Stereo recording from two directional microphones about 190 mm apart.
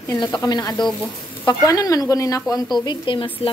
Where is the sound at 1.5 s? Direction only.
20° left (ahead or behind).